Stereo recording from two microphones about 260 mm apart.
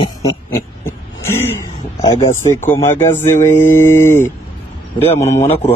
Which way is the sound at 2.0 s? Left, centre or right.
Centre.